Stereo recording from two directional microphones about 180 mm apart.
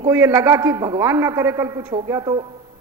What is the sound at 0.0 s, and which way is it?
A man's voice, 15° right (ahead or behind).